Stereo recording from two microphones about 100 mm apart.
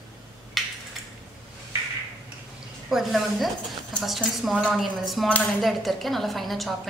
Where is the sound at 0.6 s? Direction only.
Centre (ahead or behind).